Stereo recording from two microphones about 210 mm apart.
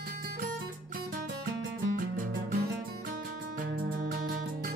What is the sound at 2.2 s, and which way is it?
Music, 40° right (ahead or behind).